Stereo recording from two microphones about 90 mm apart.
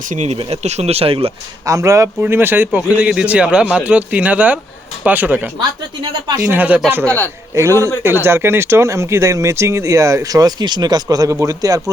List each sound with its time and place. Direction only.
0.9 s speech: 90° right
1.6 s speech: 35° right (ahead or behind)
2.2 s speech: 25° right (ahead or behind)
3.1 s speech: 10° right (ahead or behind)
5.5 s speech: 55° right (ahead or behind)
6.4 s speech: 20° right (ahead or behind)
7.0 s a man's voice: 15° left (ahead or behind)
7.5 s speech: 35° right (ahead or behind)